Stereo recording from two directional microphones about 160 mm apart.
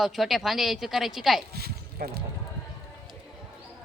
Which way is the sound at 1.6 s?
80° right.